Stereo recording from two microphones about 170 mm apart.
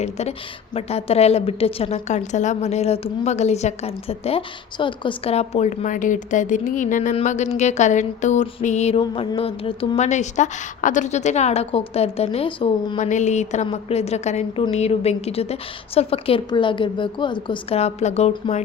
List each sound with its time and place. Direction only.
0.0 s a woman's voice: 40° left (ahead or behind)
13.0 s a woman's voice: 45° left (ahead or behind)